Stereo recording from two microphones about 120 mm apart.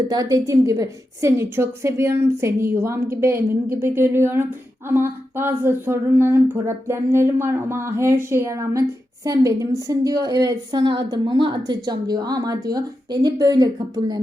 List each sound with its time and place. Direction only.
0.1 s a woman's voice: 30° right (ahead or behind)